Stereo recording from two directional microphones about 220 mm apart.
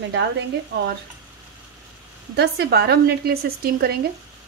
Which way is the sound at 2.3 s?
50° right (ahead or behind).